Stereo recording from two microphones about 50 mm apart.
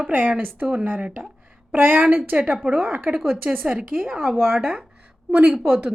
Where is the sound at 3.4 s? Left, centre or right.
Right.